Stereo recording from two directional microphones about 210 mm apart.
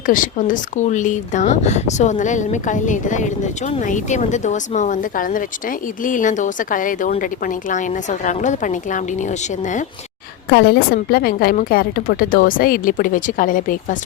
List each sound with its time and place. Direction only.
0.0 s speech: 40° left (ahead or behind)
10.5 s a woman's voice: 50° left (ahead or behind)